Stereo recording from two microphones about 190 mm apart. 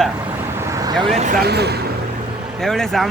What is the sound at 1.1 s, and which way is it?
Speech, 40° right (ahead or behind).